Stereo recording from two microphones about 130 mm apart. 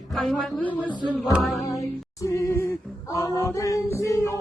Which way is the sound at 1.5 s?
25° left (ahead or behind).